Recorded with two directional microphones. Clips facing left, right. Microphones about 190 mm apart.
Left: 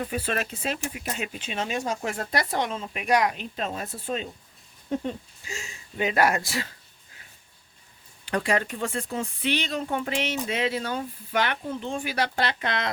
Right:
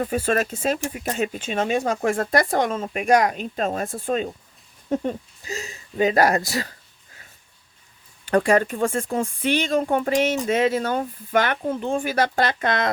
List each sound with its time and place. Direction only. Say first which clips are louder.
0.0 s speech: right 7 dB; 45° right (ahead or behind)
8.2 s speech: right 7 dB; 50° right (ahead or behind)